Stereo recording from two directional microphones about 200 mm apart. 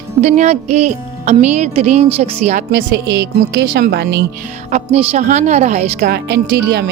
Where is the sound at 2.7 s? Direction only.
55° right (ahead or behind).